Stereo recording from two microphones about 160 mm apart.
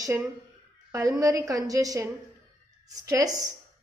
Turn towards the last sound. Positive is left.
turn(degrees=-20)  # may be behind; listen again after turning